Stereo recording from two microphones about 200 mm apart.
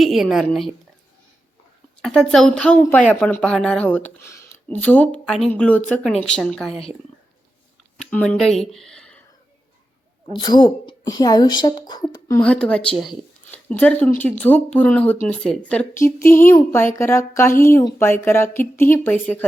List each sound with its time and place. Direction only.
0.0 s speech: centre (ahead or behind)
2.0 s speech: centre (ahead or behind)
7.9 s speech: 5° left (ahead or behind)
10.3 s speech: 20° left (ahead or behind)
12.4 s speech: 5° left (ahead or behind)